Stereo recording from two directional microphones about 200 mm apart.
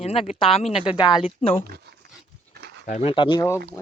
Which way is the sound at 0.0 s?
30° left (ahead or behind).